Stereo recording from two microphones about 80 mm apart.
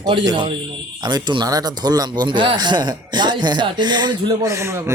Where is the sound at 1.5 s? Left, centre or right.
Right.